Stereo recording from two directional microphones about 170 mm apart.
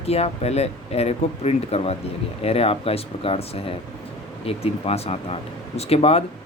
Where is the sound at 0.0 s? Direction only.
35° left (ahead or behind).